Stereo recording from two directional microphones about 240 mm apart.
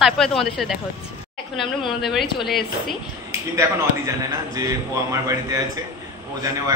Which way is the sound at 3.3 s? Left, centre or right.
Centre.